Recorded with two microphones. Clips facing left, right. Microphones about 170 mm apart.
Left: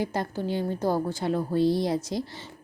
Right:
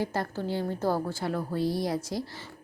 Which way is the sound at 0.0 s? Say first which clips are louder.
Left 2 dB; 15° left (ahead or behind).